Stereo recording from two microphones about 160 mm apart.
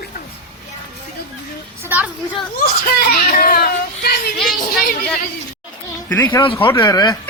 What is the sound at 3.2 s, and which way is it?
Speech, 65° left (ahead or behind).